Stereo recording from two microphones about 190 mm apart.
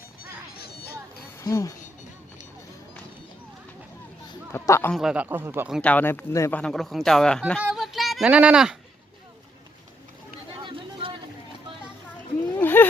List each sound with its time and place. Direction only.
0.2 s music: 55° left (ahead or behind)
1.4 s speech: 15° left (ahead or behind)
4.5 s a man's voice: 15° left (ahead or behind)
4.9 s speech: 5° right (ahead or behind)
5.8 s speech: 10° left (ahead or behind)
7.6 s child singing: centre (ahead or behind)
10.6 s a sound: 25° right (ahead or behind)
12.5 s a sound: 10° left (ahead or behind)